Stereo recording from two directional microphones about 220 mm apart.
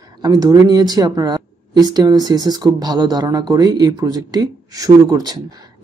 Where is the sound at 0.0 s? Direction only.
15° right (ahead or behind).